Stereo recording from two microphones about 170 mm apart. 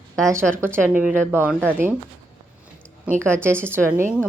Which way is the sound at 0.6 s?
15° right (ahead or behind).